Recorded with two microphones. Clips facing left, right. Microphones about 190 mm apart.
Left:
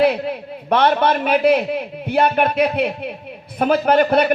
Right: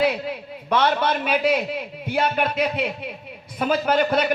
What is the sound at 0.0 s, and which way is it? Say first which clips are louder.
A man's voice: left 5 dB; 55° left (ahead or behind).